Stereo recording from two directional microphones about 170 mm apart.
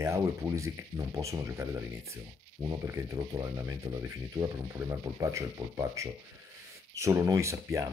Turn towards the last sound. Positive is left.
turn(degrees=-15)  # may be behind; listen again after turning